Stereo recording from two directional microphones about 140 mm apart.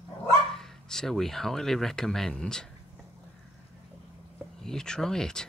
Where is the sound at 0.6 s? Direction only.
5° left (ahead or behind).